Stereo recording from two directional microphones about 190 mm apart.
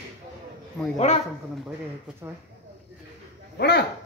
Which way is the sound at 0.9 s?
35° left (ahead or behind).